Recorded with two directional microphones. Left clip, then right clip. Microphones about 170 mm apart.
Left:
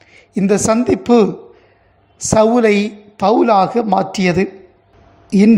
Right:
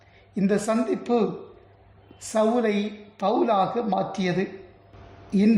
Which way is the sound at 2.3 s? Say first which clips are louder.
Left 11 dB; 35° left (ahead or behind).